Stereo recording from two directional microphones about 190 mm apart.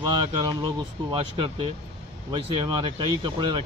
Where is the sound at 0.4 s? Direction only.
20° right (ahead or behind).